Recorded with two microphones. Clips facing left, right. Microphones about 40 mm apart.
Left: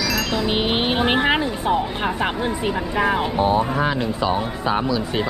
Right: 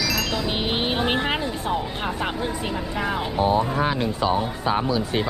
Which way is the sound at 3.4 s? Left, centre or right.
Left.